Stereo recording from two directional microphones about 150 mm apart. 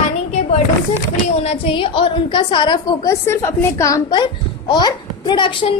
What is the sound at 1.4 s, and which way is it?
A woman's voice, 40° left (ahead or behind).